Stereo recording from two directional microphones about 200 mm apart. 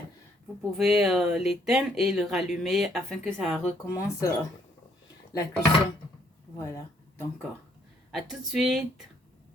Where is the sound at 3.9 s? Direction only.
15° left (ahead or behind).